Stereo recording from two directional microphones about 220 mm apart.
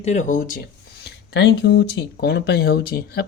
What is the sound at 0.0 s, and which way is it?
Speech, 35° left (ahead or behind).